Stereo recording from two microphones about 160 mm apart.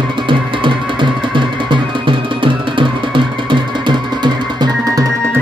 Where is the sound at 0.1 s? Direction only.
30° right (ahead or behind).